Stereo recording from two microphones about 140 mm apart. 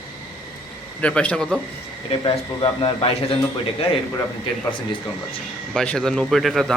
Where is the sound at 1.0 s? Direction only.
10° left (ahead or behind).